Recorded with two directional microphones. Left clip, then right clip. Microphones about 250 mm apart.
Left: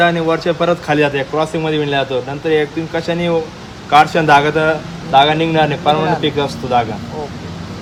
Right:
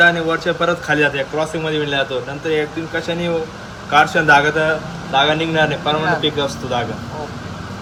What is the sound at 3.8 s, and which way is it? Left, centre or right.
Speech, left.